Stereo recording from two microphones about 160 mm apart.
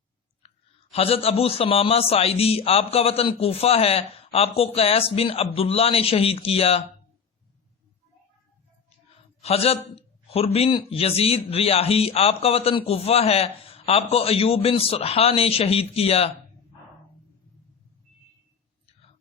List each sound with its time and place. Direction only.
0.9 s a man's voice: 35° left (ahead or behind)
9.4 s a man's voice: 40° left (ahead or behind)